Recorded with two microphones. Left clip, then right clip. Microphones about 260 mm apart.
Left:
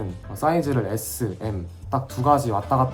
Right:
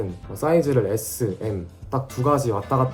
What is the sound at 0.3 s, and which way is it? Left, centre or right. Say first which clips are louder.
Speech: right 2 dB; left.